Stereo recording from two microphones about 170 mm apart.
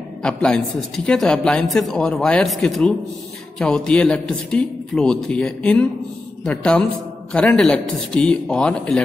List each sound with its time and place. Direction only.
0.2 s a woman's voice: 5° left (ahead or behind)